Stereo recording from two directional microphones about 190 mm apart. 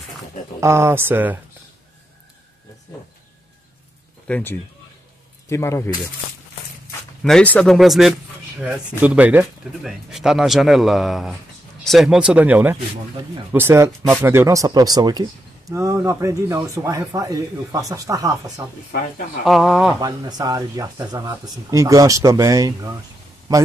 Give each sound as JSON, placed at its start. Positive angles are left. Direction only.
{"t": 0.6, "sound": "speech", "side_deg": -15}
{"t": 4.3, "sound": "speech", "side_deg": 10}
{"t": 7.2, "sound": "speech", "side_deg": 5}
{"t": 18.9, "sound": "speech", "side_deg": 45}
{"t": 19.4, "sound": "speech", "side_deg": 0}
{"t": 20.0, "sound": "speech", "side_deg": -20}